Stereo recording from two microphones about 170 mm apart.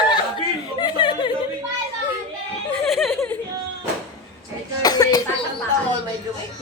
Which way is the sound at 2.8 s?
Centre (ahead or behind).